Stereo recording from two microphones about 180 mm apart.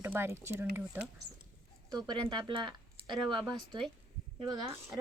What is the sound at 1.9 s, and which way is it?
Speech, 25° right (ahead or behind).